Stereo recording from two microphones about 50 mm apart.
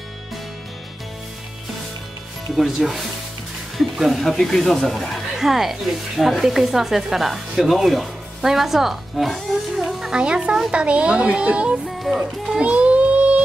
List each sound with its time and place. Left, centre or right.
2.5 s speech: centre
5.3 s speech: centre
10.1 s speech: centre
12.5 s music: right